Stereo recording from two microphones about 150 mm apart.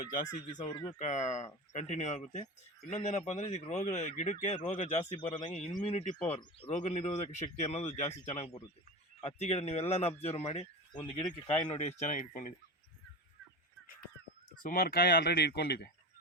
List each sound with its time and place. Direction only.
0.1 s speech: 60° left (ahead or behind)
0.7 s speech: 15° left (ahead or behind)
0.9 s speech: 50° left (ahead or behind)
10.9 s speech: 30° left (ahead or behind); by 12.5 s 60° left (ahead or behind)
14.6 s speech: 70° left (ahead or behind); by 15.9 s 90° left